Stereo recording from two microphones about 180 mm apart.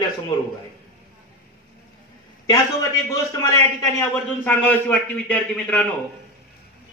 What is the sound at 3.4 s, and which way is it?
A man's voice, 20° left (ahead or behind).